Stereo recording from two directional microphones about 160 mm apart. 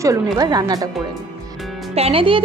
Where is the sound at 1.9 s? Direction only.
35° right (ahead or behind).